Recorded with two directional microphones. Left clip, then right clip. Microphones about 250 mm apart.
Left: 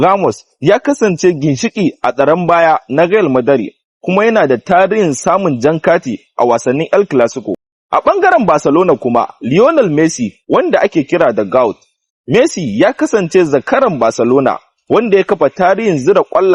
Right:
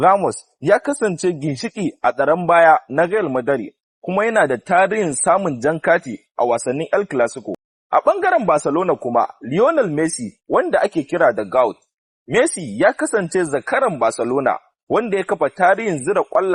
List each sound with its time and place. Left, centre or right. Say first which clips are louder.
0.2 s a man's voice: left 7 dB; left